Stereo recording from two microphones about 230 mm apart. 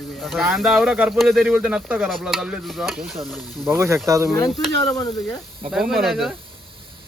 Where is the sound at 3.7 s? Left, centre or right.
Centre.